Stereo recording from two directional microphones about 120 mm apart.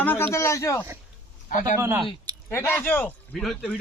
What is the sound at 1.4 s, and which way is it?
Speech, 90° left.